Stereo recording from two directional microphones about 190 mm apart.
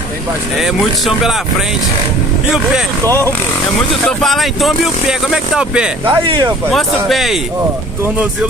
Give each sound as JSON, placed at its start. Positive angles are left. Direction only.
{"t": 0.6, "sound": "speech", "side_deg": 0}
{"t": 4.2, "sound": "speech", "side_deg": 0}
{"t": 6.0, "sound": "speech", "side_deg": -25}
{"t": 7.1, "sound": "speech", "side_deg": 0}